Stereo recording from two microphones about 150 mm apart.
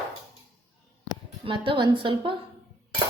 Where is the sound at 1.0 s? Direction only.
35° right (ahead or behind).